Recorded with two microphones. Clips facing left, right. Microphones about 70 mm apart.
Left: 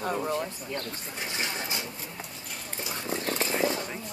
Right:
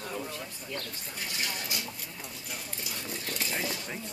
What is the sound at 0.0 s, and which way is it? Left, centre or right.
Speech, left.